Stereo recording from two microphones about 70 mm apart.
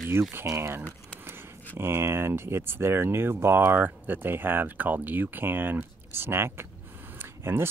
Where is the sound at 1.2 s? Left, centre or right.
Right.